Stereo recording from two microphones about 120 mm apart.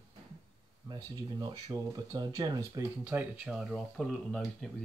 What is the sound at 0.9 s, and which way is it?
Speech, 35° right (ahead or behind).